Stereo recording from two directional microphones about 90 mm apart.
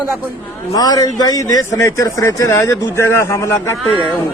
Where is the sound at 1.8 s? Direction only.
35° left (ahead or behind).